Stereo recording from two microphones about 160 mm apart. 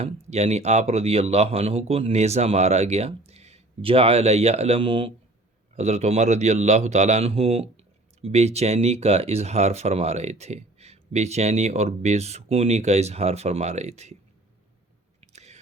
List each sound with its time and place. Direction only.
0.0 s speech: 45° right (ahead or behind)
5.7 s a man's voice: 45° right (ahead or behind)
15.2 s a sound: 45° right (ahead or behind)